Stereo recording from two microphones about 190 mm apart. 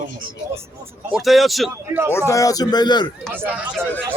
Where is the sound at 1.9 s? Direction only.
10° right (ahead or behind).